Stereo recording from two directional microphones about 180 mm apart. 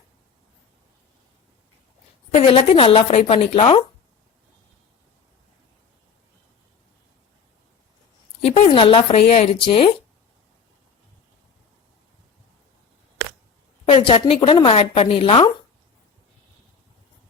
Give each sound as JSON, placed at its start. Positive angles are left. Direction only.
{"t": 2.3, "sound": "a woman's voice", "side_deg": 35}
{"t": 8.4, "sound": "a woman's voice", "side_deg": 35}
{"t": 13.8, "sound": "a woman's voice", "side_deg": 35}